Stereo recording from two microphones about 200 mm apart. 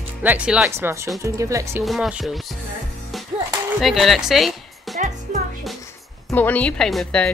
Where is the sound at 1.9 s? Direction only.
5° right (ahead or behind).